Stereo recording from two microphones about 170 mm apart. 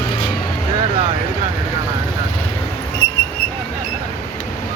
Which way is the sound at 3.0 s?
20° left (ahead or behind).